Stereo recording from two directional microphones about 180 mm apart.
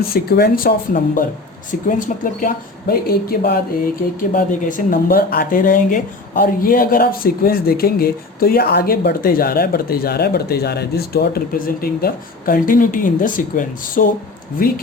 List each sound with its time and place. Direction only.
0.1 s speech: 60° left (ahead or behind)